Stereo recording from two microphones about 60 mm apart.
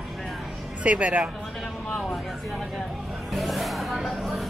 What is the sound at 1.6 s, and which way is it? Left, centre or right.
Speech, centre.